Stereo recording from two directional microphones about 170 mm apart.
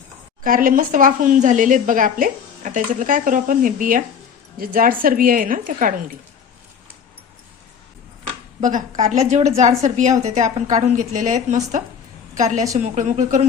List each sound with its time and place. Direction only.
0.4 s a woman's voice: 55° right (ahead or behind)
8.6 s a woman's voice: 50° right (ahead or behind)